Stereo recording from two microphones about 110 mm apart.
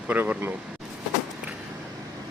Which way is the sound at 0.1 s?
15° right (ahead or behind).